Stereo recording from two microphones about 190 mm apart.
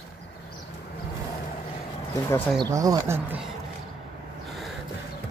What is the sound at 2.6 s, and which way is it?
Speech, 20° right (ahead or behind).